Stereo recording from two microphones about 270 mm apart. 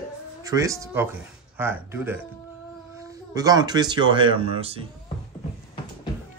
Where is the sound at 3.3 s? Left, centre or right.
Centre.